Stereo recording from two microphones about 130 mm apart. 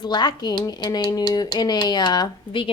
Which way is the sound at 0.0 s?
35° left (ahead or behind).